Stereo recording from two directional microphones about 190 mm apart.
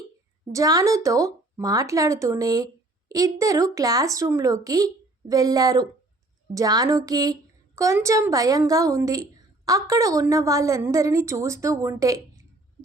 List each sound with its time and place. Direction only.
0.5 s a woman's voice: 15° right (ahead or behind)